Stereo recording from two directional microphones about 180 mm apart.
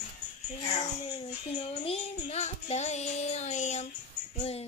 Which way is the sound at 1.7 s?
35° left (ahead or behind).